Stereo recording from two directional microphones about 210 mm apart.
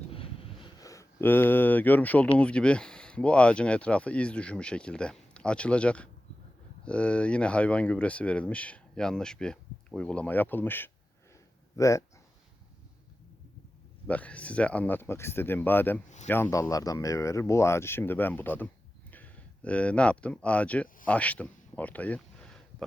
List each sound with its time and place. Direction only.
0.1 s a sound: 25° left (ahead or behind)
0.6 s speech: 15° left (ahead or behind)
14.1 s speech: 5° left (ahead or behind)
16.0 s speech: 35° left (ahead or behind)
16.3 s speech: 15° left (ahead or behind)